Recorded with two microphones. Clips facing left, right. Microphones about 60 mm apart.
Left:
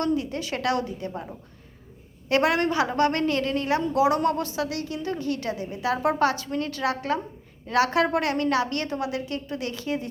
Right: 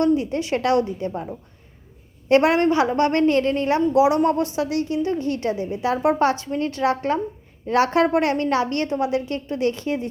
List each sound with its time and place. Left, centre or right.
0.0 s a woman's voice: right
2.3 s a woman's voice: right
3.9 s a woman's voice: right